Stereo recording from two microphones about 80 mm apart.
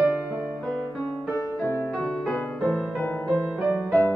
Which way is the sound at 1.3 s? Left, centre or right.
Left.